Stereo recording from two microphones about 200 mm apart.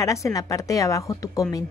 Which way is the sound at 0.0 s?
15° left (ahead or behind).